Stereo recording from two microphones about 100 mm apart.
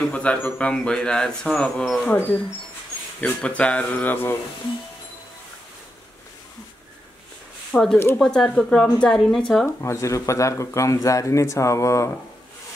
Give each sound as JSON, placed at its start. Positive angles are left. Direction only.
{"t": 0.1, "sound": "speech", "side_deg": 15}
{"t": 3.2, "sound": "speech", "side_deg": 15}
{"t": 7.7, "sound": "speech", "side_deg": 5}
{"t": 9.8, "sound": "speech", "side_deg": 30}